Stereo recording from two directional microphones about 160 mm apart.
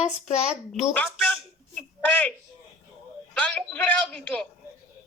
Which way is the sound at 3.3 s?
10° left (ahead or behind).